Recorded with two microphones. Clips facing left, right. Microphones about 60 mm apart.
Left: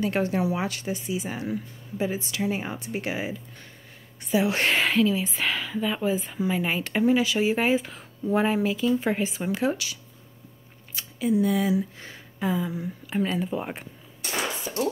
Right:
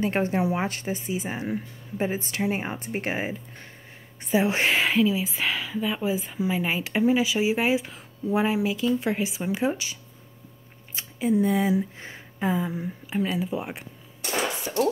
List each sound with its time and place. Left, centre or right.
0.0 s speech: right
4.6 s speech: centre
9.5 s speech: centre
11.0 s a sound: right
11.4 s speech: right
13.1 s speech: centre
14.7 s speech: right